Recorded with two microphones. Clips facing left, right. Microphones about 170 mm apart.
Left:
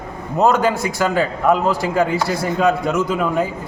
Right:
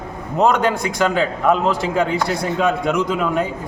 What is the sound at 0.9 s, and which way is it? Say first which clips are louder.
A man's voice: even; 5° left (ahead or behind).